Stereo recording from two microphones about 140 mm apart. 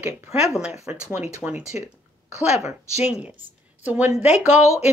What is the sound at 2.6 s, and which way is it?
Speech, 50° left (ahead or behind).